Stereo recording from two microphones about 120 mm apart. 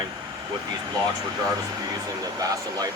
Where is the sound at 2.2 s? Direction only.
30° right (ahead or behind).